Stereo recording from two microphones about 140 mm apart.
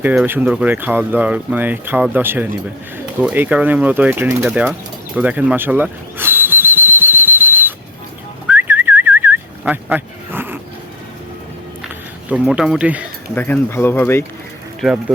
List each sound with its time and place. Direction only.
0.0 s speech: 10° right (ahead or behind)
4.4 s speech: 5° right (ahead or behind)
5.1 s whistle: 10° right (ahead or behind)
8.4 s whistling: 15° right (ahead or behind)
12.3 s speech: 5° right (ahead or behind)
13.3 s speech: 10° left (ahead or behind)